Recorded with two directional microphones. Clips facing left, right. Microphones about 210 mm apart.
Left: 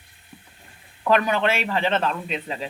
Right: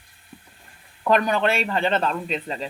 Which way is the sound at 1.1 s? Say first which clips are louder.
Even; centre (ahead or behind).